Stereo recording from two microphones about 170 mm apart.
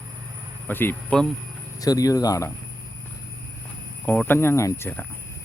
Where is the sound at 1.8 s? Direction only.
20° left (ahead or behind).